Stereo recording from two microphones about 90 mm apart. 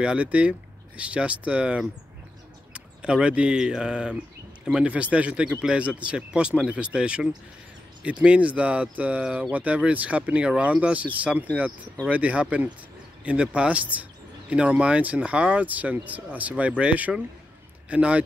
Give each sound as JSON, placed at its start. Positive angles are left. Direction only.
{"t": 0.0, "sound": "a man's voice", "side_deg": -15}